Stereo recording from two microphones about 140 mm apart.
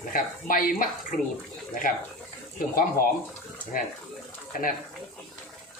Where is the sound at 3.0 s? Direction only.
90° left.